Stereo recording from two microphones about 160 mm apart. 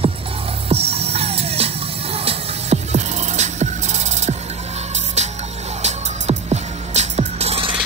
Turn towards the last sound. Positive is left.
turn(degrees=-40)  # may be behind; listen again after turning